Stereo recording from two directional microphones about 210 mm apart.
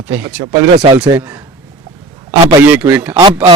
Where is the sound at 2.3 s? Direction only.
10° right (ahead or behind).